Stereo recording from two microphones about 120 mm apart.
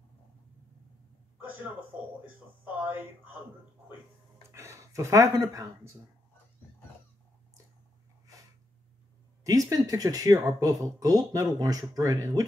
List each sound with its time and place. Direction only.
2.2 s speech: 20° right (ahead or behind)
4.4 s speech: 25° right (ahead or behind)
9.4 s speech: 30° right (ahead or behind)